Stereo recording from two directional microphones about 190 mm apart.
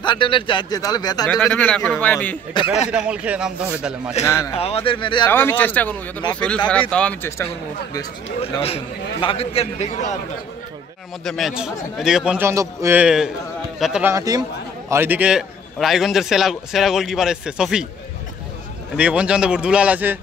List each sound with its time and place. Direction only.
0.0 s speech: 25° left (ahead or behind)
1.4 s a man's voice: 5° left (ahead or behind)
2.9 s a man's voice: 5° right (ahead or behind)
4.2 s a man's voice: 15° left (ahead or behind)
4.6 s speech: 30° left (ahead or behind)
5.2 s a man's voice: 10° left (ahead or behind)
8.6 s a man's voice: 30° left (ahead or behind)
11.2 s a man's voice: centre (ahead or behind)
14.1 s a man's voice: 20° right (ahead or behind)
18.9 s a man's voice: 5° right (ahead or behind)